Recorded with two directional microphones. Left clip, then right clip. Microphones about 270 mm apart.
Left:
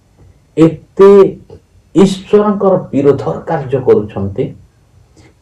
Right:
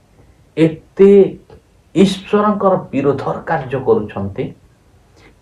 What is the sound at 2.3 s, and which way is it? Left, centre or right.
Speech, right.